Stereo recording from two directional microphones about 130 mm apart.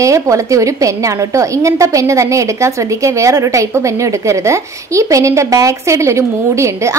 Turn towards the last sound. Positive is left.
turn(degrees=-20)  # may be behind; listen again after turning